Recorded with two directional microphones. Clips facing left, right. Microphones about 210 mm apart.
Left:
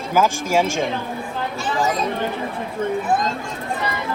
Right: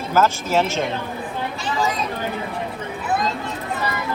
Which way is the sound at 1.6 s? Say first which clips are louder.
Left 2 dB; 50° left (ahead or behind).